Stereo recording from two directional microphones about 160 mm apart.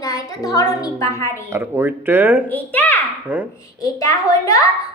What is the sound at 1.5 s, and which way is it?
Speech, 15° right (ahead or behind).